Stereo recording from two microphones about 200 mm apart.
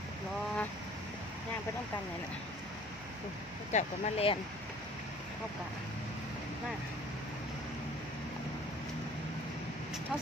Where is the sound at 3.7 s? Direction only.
35° left (ahead or behind).